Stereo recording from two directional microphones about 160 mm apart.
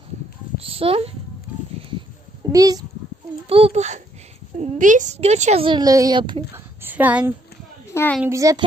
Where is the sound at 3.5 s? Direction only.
35° right (ahead or behind).